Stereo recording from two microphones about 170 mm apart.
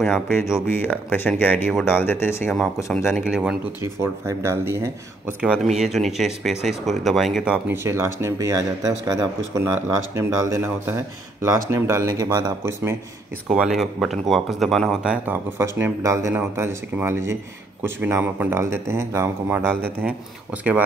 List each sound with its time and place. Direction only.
0.0 s speech: centre (ahead or behind)
0.7 s speech: 10° left (ahead or behind)
3.1 s speech: centre (ahead or behind)
3.8 s speech: 15° right (ahead or behind)
5.4 s speech: 5° right (ahead or behind); by 12.9 s 20° right (ahead or behind)
13.5 s speech: 5° right (ahead or behind)